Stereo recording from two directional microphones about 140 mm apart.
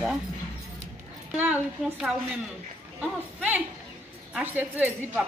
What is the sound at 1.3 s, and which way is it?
A woman's voice, 10° right (ahead or behind).